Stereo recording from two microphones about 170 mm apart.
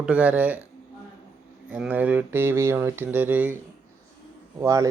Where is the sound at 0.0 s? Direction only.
5° right (ahead or behind).